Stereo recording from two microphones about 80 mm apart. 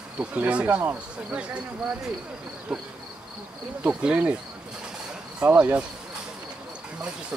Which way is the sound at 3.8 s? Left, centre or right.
Centre.